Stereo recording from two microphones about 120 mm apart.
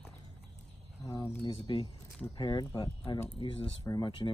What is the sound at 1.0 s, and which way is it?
Speech, 30° left (ahead or behind).